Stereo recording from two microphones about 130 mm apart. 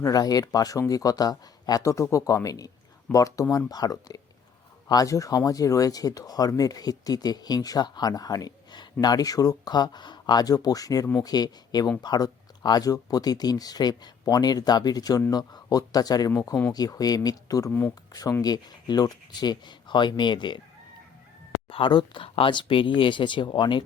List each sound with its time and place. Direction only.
0.0 s speech: 30° left (ahead or behind)
17.7 s speech: 15° left (ahead or behind)
18.1 s speech: 30° left (ahead or behind)
21.7 s speech: 40° left (ahead or behind)